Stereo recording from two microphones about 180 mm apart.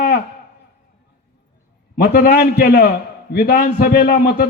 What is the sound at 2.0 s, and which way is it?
A man's voice, 60° left (ahead or behind).